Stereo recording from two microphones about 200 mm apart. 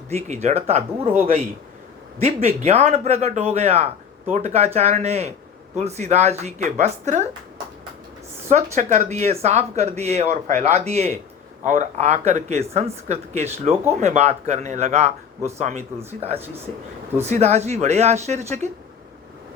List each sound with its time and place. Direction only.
0.1 s speech: 30° right (ahead or behind)
2.2 s speech: 30° right (ahead or behind)
8.4 s speech: 35° right (ahead or behind)
17.2 s speech: 35° right (ahead or behind)